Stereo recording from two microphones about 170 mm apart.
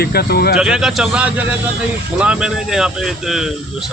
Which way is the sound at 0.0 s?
70° left (ahead or behind).